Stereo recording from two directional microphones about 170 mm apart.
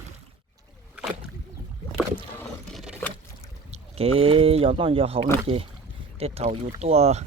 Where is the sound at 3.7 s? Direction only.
35° right (ahead or behind).